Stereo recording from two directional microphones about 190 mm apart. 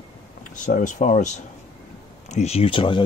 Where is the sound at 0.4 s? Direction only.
40° left (ahead or behind).